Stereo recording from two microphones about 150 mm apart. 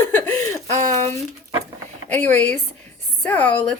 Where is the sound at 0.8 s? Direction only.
50° right (ahead or behind).